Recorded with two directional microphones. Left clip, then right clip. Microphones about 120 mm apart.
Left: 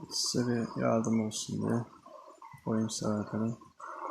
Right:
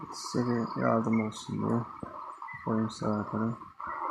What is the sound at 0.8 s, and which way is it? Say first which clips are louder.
Speech: right 2 dB; 25° left (ahead or behind).